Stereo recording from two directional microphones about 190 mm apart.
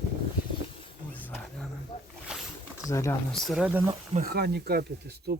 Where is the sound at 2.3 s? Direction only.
5° right (ahead or behind).